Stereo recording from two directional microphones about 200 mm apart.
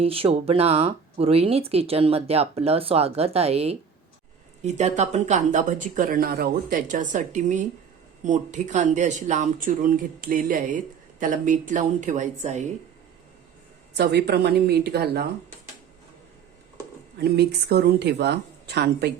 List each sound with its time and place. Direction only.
0.0 s speech: 30° right (ahead or behind)
13.9 s speech: 55° right (ahead or behind)
17.2 s speech: 50° right (ahead or behind)